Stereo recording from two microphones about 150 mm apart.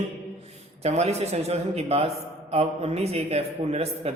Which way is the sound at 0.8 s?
45° right (ahead or behind).